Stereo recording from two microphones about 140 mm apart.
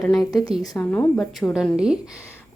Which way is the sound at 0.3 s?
25° left (ahead or behind).